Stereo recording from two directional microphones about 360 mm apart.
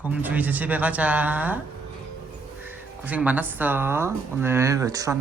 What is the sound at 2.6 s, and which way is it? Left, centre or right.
Speech, centre.